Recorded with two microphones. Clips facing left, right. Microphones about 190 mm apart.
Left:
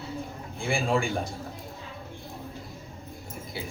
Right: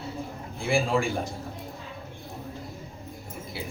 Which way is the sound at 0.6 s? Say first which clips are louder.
Right 2 dB; centre (ahead or behind).